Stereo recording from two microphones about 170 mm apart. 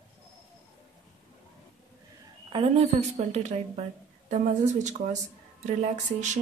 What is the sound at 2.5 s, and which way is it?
A woman's voice, 35° right (ahead or behind).